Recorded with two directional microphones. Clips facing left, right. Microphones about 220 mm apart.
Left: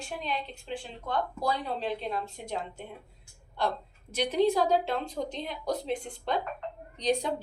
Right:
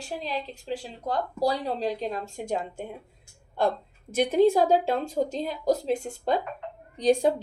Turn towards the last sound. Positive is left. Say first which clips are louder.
# right 6 dB
turn(degrees=-50)  # may be behind; listen again after turning